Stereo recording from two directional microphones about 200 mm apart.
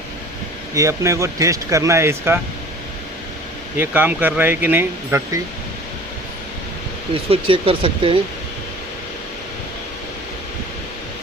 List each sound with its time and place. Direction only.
0.7 s speech: 15° right (ahead or behind)
3.8 s speech: 10° right (ahead or behind)
7.1 s speech: 25° right (ahead or behind)